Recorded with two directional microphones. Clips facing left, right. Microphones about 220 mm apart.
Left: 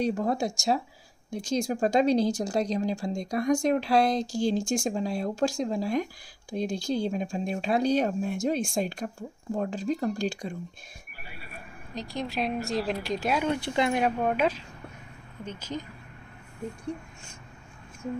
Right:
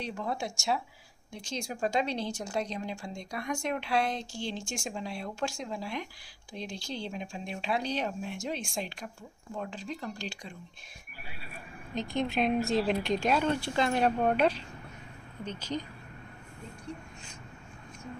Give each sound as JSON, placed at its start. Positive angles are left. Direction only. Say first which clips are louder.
{"t": 0.0, "sound": "speech", "louder": "left 8 dB", "side_deg": 40}
{"t": 11.9, "sound": "a woman's voice", "louder": "right 2 dB", "side_deg": 0}